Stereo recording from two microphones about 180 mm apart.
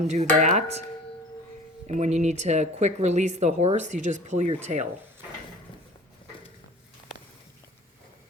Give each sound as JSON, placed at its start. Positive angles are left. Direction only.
{"t": 0.0, "sound": "speech", "side_deg": -40}
{"t": 1.9, "sound": "speech", "side_deg": -40}